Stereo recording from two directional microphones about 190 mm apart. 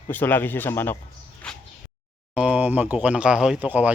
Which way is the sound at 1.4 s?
5° left (ahead or behind).